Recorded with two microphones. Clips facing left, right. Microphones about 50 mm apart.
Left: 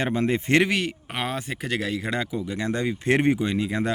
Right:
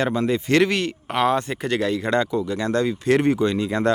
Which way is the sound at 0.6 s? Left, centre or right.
Centre.